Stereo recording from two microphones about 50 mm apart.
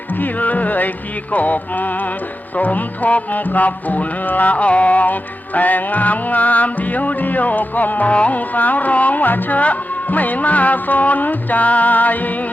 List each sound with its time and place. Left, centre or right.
0.2 s music: left